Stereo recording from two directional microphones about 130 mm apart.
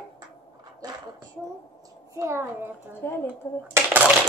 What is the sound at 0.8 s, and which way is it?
Speech, 30° right (ahead or behind).